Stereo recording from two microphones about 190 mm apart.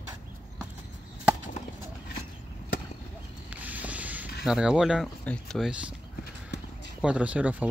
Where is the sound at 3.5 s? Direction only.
10° right (ahead or behind).